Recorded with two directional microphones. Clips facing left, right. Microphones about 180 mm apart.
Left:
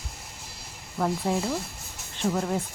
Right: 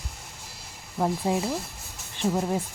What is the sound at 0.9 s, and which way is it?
Speech, 20° right (ahead or behind).